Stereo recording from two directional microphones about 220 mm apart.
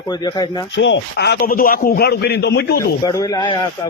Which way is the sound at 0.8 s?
55° left (ahead or behind).